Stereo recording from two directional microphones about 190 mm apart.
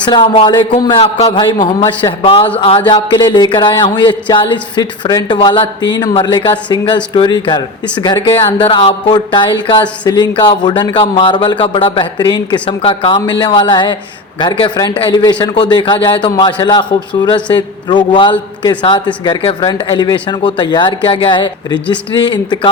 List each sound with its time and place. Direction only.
0.1 s a man's voice: 25° left (ahead or behind)